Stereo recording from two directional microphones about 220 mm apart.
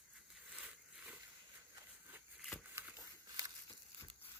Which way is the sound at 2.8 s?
10° right (ahead or behind).